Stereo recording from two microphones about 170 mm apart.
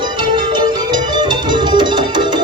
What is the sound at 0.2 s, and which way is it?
Music, 25° right (ahead or behind).